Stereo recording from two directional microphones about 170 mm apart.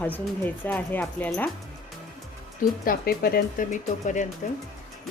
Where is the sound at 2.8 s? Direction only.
60° left (ahead or behind).